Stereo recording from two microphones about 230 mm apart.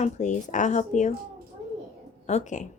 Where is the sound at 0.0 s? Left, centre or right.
Left.